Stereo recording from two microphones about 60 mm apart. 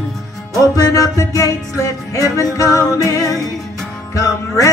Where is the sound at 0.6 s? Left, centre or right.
Left.